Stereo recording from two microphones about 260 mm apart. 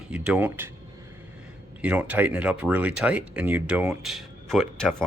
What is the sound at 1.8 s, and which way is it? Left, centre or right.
Speech, centre.